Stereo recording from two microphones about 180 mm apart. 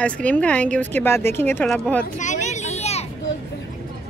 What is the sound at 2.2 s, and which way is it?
Vehicle, 40° left (ahead or behind).